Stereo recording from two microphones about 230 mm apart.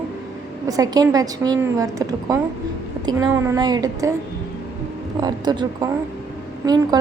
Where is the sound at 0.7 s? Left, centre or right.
Centre.